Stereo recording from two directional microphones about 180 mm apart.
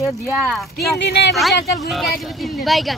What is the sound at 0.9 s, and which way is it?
Speech, 70° left (ahead or behind).